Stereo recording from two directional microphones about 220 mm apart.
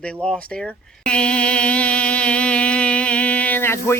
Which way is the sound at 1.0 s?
5° left (ahead or behind).